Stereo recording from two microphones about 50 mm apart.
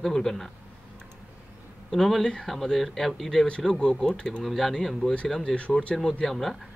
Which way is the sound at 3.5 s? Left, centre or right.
Centre.